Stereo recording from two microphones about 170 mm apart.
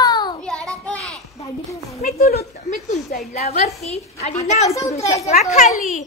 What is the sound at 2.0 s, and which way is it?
Speech, 65° left (ahead or behind).